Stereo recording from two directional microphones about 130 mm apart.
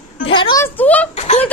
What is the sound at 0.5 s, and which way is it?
Speech, 15° left (ahead or behind).